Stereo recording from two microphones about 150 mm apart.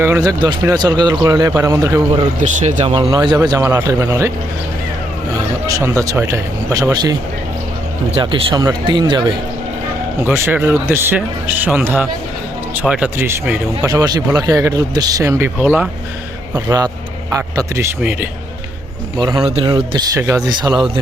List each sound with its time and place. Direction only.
0.0 s speech: 20° right (ahead or behind)
2.4 s speech: 55° right (ahead or behind)
2.8 s speech: 35° right (ahead or behind); by 4.3 s 20° right (ahead or behind)
5.6 s speech: 20° right (ahead or behind)
8.1 s speech: 35° right (ahead or behind)
10.2 s speech: 15° right (ahead or behind)
13.8 s speech: 25° right (ahead or behind)
18.0 s speech: 10° right (ahead or behind)
19.2 s speech: 25° right (ahead or behind)